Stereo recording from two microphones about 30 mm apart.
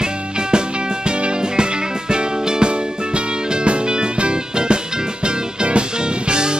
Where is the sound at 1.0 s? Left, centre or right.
Right.